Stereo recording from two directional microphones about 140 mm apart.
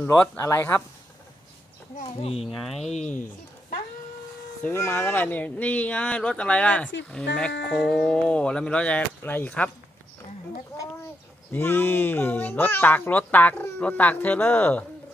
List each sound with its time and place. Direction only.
0.4 s speech: 20° left (ahead or behind)
2.4 s speech: centre (ahead or behind)
2.9 s speech: 55° left (ahead or behind)
4.6 s speech: 20° left (ahead or behind)
11.5 s speech: 15° left (ahead or behind)